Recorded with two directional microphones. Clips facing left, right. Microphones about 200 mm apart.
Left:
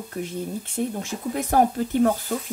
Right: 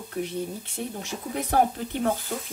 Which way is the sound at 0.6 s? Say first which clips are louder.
Left 6 dB; 50° left (ahead or behind).